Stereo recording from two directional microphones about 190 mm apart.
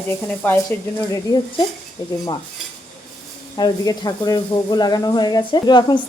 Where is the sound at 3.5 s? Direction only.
20° left (ahead or behind).